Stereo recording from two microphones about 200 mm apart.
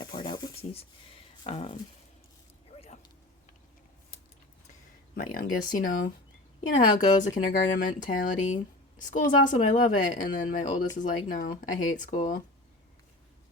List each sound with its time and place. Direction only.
0.0 s rub: 20° left (ahead or behind)
1.5 s speech: 30° left (ahead or behind)
2.7 s a sound: 30° left (ahead or behind)
5.1 s a woman's voice: 45° left (ahead or behind)